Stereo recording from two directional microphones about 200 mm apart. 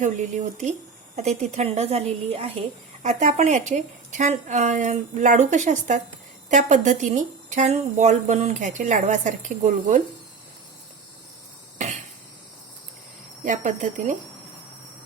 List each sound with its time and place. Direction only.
0.0 s a woman's voice: 35° right (ahead or behind)
13.4 s a woman's voice: 40° right (ahead or behind)